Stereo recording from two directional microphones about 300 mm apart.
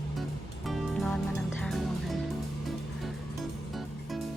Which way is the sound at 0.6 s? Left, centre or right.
Centre.